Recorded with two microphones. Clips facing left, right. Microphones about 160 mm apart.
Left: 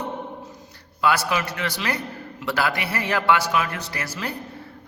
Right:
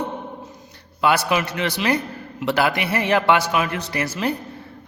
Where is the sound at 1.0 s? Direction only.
20° right (ahead or behind).